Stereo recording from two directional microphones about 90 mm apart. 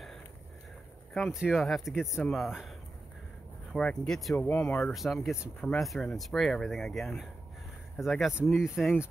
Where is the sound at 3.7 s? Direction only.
5° left (ahead or behind).